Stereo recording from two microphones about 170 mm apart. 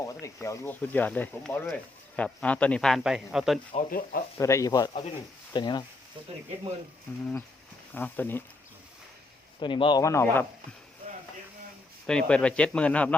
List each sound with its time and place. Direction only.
0.0 s speech: 20° left (ahead or behind); by 3.6 s centre (ahead or behind)
3.7 s speech: 55° left (ahead or behind)
4.4 s speech: 15° left (ahead or behind)
7.9 s speech: 10° left (ahead or behind)
9.6 s speech: 30° left (ahead or behind)
10.0 s speech: 15° left (ahead or behind)
12.0 s speech: 5° left (ahead or behind)